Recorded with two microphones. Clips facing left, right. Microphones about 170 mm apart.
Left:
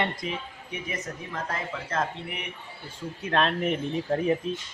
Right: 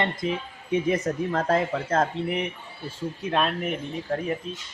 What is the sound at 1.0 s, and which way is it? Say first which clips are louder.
Speech: right 10 dB; 60° right (ahead or behind).